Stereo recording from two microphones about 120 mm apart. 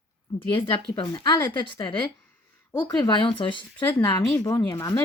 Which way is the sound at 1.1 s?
35° left (ahead or behind).